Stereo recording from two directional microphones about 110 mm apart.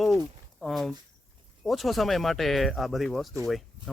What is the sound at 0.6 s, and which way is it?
Speech, centre (ahead or behind).